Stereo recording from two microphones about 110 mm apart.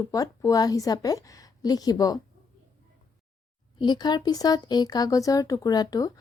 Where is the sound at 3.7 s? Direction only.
40° left (ahead or behind).